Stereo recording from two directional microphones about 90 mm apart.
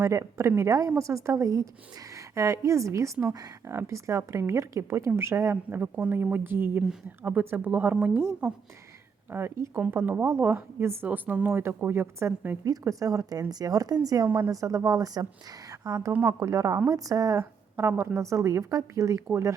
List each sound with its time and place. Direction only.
0.0 s a woman's voice: 35° right (ahead or behind); by 7.9 s 20° right (ahead or behind)
8.1 s a woman's voice: 30° right (ahead or behind)
12.6 s a woman's voice: 40° right (ahead or behind)
17.7 s a woman's voice: 30° right (ahead or behind)